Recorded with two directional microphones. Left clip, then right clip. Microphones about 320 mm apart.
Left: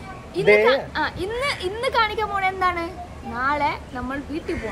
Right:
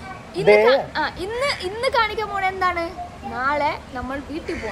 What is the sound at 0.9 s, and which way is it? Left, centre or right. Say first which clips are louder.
Speech: right 1 dB; centre.